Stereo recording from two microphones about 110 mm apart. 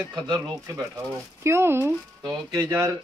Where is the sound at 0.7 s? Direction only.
30° right (ahead or behind).